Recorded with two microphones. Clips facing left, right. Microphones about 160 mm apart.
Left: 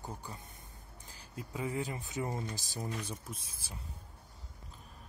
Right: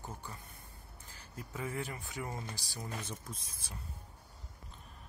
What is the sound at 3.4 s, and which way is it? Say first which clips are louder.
Speech: even; 30° left (ahead or behind).